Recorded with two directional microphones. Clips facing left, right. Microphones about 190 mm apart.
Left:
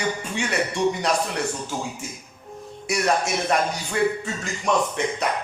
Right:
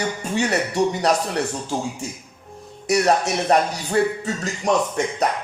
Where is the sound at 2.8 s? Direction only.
35° right (ahead or behind).